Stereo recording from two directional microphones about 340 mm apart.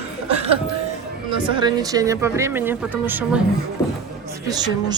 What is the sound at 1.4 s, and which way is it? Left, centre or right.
Speech, centre.